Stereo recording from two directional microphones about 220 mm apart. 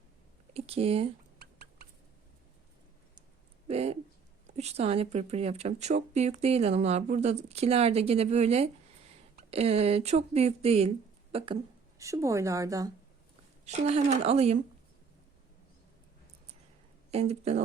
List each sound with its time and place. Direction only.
0.5 s speech: 25° right (ahead or behind)
1.4 s rodents: 45° right (ahead or behind)
3.7 s speech: 30° right (ahead or behind)
11.9 s a woman's voice: 15° right (ahead or behind)
13.7 s speech: 30° right (ahead or behind)
17.1 s speech: 30° right (ahead or behind)